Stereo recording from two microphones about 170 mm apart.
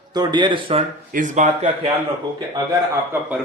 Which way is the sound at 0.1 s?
25° right (ahead or behind).